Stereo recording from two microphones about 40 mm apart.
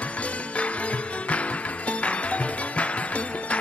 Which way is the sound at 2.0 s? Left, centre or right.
Left.